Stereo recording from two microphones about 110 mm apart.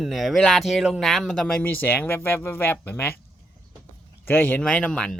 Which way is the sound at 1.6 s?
15° left (ahead or behind).